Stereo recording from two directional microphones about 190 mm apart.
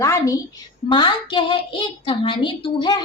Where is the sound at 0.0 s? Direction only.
15° left (ahead or behind).